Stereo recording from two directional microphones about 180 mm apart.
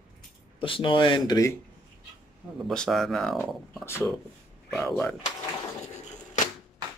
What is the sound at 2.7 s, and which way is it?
Speech, centre (ahead or behind).